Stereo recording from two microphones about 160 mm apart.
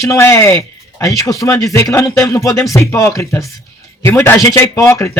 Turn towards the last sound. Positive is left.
turn(degrees=15)  # may be behind; listen again after turning